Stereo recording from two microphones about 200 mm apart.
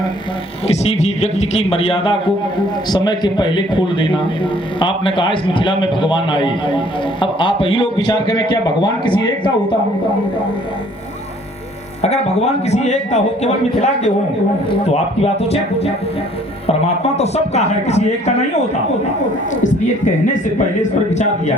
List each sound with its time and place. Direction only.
0.7 s a man's voice: 30° left (ahead or behind)
12.0 s a man's voice: 35° left (ahead or behind)
21.1 s a man's voice: 35° left (ahead or behind)